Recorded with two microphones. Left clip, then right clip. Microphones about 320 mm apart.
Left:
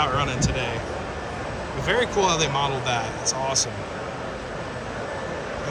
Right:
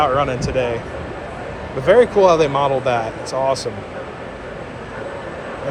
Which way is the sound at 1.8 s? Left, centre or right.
Centre.